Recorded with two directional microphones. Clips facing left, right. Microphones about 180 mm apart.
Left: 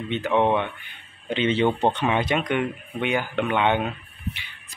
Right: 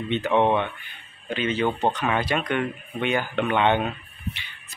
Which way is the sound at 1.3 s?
25° left (ahead or behind).